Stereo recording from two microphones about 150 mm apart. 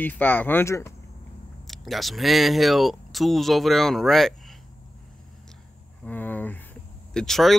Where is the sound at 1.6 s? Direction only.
Centre (ahead or behind).